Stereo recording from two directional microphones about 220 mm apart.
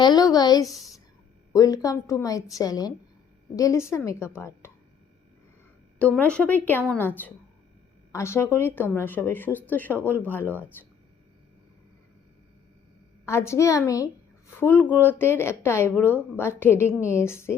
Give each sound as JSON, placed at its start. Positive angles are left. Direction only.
{"t": 0.0, "sound": "a woman's voice", "side_deg": 15}
{"t": 6.0, "sound": "a woman's voice", "side_deg": 5}
{"t": 13.2, "sound": "a woman's voice", "side_deg": 10}